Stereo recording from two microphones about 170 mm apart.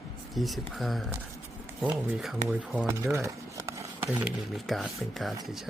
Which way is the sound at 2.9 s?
15° right (ahead or behind).